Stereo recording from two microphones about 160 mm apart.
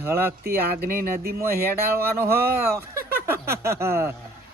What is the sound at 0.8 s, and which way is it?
Speech, 70° right (ahead or behind).